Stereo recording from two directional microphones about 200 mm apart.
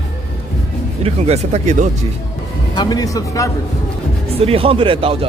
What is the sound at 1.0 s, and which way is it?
Speech, 35° right (ahead or behind).